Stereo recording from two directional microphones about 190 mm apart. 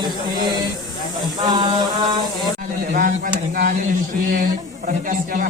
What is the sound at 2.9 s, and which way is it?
Speech, 50° right (ahead or behind).